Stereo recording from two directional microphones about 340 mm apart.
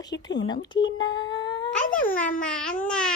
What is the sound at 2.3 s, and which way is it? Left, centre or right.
Babbling, centre.